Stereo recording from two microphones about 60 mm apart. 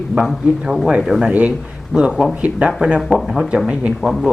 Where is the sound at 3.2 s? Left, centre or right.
Centre.